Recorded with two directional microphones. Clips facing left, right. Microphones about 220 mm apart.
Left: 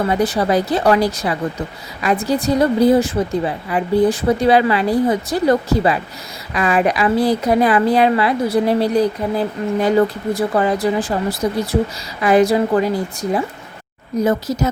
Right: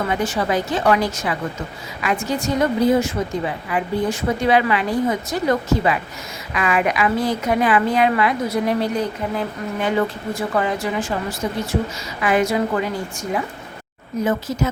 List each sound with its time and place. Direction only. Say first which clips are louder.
0.1 s a woman's voice: left 4 dB; 35° left (ahead or behind)